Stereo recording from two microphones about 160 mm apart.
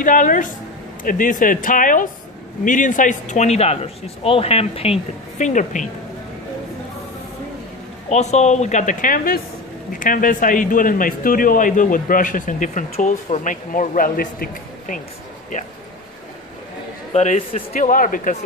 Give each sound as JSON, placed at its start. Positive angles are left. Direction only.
{"t": 0.0, "sound": "a man's voice", "side_deg": 55}
{"t": 8.1, "sound": "a man's voice", "side_deg": 45}
{"t": 17.1, "sound": "a man's voice", "side_deg": 45}